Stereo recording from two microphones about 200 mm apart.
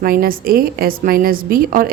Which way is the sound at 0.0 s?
45° right (ahead or behind).